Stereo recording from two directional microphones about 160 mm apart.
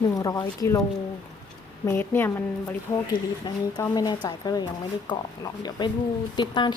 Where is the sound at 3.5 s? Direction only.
30° left (ahead or behind).